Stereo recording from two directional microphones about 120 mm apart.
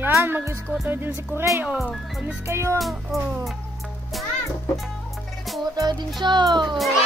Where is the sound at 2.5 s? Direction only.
20° right (ahead or behind).